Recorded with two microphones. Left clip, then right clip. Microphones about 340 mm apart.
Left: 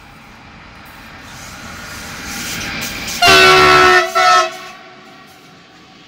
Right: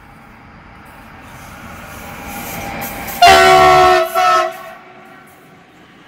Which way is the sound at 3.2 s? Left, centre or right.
Right.